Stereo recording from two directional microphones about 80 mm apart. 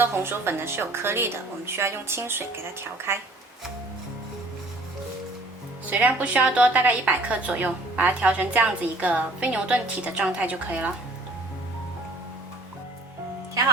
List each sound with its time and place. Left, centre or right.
0.0 s a woman's voice: right
5.8 s a woman's voice: right